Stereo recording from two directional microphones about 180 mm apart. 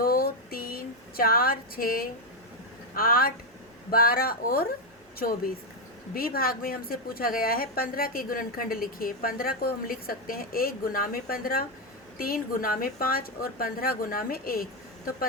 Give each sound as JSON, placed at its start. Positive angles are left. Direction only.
{"t": 0.0, "sound": "a sound", "side_deg": 55}
{"t": 2.9, "sound": "speech", "side_deg": 55}
{"t": 6.1, "sound": "a woman's voice", "side_deg": 55}